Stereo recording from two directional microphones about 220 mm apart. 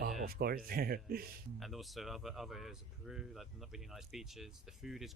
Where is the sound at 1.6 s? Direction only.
Centre (ahead or behind).